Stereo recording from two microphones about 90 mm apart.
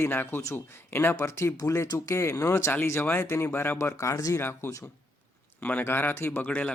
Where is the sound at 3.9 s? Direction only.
35° left (ahead or behind); by 6.7 s 20° left (ahead or behind).